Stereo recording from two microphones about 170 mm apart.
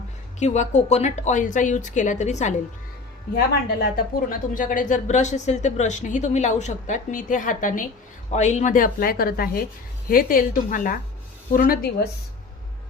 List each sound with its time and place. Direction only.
0.3 s speech: 45° left (ahead or behind)
3.3 s speech: 65° left (ahead or behind)